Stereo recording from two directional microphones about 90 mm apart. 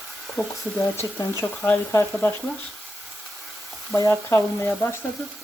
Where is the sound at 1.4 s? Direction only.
15° left (ahead or behind).